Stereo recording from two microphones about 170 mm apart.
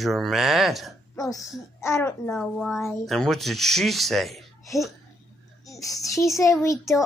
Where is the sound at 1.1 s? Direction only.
20° left (ahead or behind).